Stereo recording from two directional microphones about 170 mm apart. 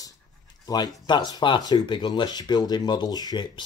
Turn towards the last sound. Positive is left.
turn(degrees=25)  # may be behind; listen again after turning